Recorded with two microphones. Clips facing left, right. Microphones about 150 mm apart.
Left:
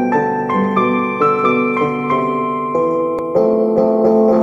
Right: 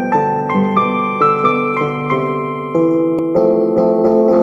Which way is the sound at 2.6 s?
20° left (ahead or behind).